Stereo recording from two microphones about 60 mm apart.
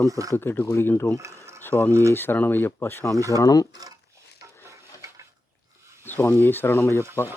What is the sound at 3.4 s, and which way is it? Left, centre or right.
Speech, left.